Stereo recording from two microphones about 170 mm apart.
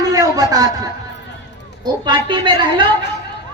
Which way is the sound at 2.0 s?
25° right (ahead or behind).